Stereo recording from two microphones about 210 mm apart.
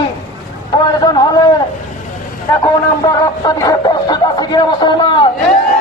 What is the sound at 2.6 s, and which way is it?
Speech, 20° left (ahead or behind).